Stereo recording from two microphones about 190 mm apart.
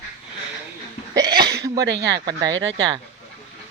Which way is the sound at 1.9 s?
70° right (ahead or behind).